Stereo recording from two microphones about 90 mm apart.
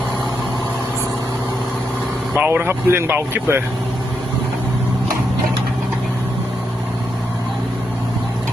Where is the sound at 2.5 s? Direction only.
25° right (ahead or behind).